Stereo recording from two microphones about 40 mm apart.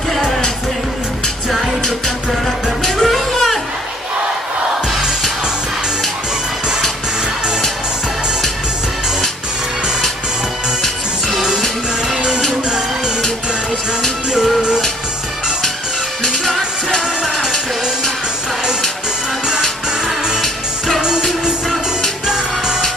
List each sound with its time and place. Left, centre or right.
2.8 s music: centre
10.8 s music: centre
12.0 s music: centre
16.5 s music: centre
20.4 s music: centre
21.0 s music: centre
22.3 s music: centre